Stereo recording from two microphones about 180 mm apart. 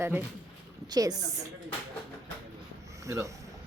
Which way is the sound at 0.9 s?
20° right (ahead or behind).